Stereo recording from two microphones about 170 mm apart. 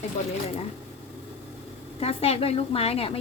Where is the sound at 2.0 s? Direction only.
35° left (ahead or behind).